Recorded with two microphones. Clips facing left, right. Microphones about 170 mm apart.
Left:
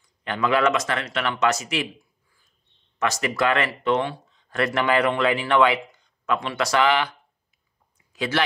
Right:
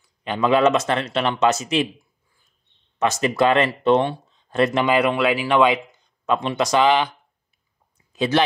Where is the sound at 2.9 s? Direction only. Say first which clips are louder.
Right 4 dB; 25° right (ahead or behind).